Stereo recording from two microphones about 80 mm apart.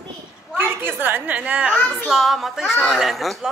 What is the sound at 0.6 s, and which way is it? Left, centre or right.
Speech, right.